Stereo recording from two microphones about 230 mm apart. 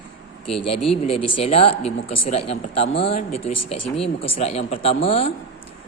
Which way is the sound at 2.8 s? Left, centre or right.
Left.